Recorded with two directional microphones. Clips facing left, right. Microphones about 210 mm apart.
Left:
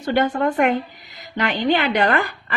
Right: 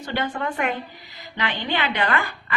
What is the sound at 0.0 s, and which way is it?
A woman's voice, 50° left (ahead or behind).